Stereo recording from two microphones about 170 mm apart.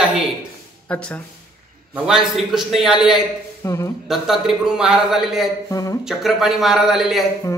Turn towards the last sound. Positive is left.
turn(degrees=0)  # may be behind; listen again after turning